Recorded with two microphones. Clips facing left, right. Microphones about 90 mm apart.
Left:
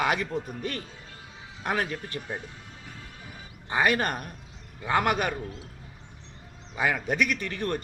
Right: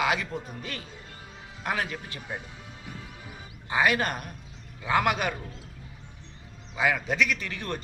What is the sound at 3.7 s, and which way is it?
A man's voice, 40° left (ahead or behind).